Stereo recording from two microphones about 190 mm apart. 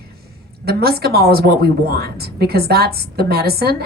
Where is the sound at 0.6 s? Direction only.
55° right (ahead or behind).